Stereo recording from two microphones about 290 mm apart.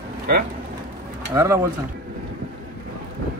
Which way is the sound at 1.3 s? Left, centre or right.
Centre.